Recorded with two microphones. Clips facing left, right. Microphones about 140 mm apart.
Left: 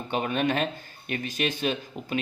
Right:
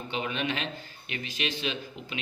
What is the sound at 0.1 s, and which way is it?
A man's voice, 50° left (ahead or behind).